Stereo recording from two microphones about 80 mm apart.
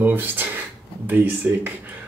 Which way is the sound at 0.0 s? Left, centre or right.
Right.